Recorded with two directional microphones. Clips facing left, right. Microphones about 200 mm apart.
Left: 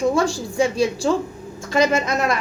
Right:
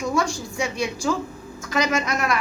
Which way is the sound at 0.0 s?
30° left (ahead or behind).